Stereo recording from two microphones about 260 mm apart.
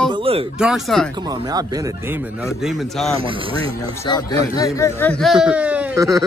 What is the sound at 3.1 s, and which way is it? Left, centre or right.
Speech, right.